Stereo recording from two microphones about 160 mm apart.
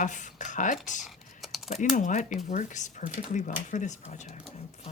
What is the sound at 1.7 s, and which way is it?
Speech, 50° left (ahead or behind).